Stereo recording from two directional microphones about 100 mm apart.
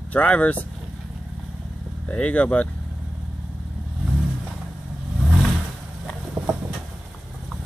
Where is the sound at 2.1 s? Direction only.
15° left (ahead or behind).